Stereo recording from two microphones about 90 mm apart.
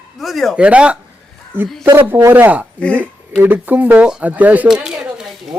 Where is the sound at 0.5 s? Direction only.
10° right (ahead or behind).